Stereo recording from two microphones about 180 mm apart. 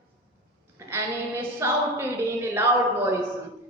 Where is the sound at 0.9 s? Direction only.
15° right (ahead or behind).